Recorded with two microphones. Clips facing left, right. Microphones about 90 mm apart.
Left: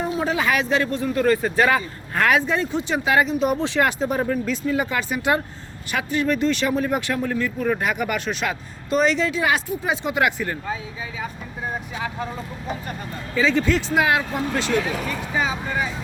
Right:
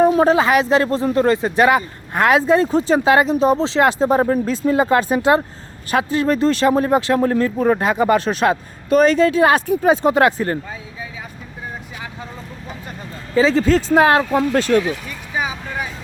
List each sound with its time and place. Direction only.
0.0 s a sound: 50° right (ahead or behind)
0.3 s speech: 30° right (ahead or behind)
2.4 s speech: 35° right (ahead or behind)
13.3 s speech: 35° right (ahead or behind)
14.3 s speech: 50° right (ahead or behind)
15.4 s vehicle: 10° right (ahead or behind)